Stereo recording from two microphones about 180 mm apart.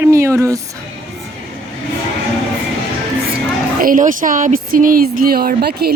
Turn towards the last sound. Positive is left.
turn(degrees=-60)  # may be behind; listen again after turning